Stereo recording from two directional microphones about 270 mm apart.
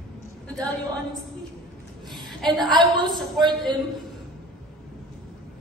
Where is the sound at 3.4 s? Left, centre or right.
Centre.